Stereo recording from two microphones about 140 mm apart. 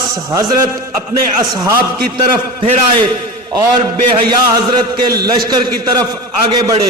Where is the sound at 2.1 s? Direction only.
40° right (ahead or behind).